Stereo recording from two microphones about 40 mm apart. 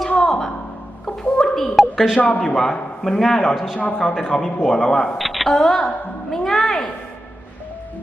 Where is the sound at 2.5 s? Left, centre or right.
Centre.